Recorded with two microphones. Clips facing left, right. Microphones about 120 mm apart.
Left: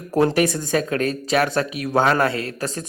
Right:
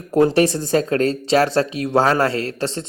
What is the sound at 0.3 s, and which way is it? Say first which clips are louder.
A man's voice: right 3 dB; 30° right (ahead or behind).